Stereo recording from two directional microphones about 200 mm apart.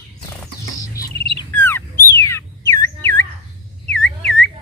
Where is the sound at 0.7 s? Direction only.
15° left (ahead or behind).